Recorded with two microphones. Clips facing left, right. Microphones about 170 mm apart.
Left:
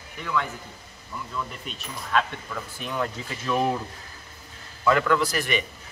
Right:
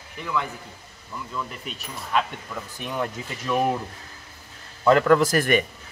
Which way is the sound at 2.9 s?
15° right (ahead or behind).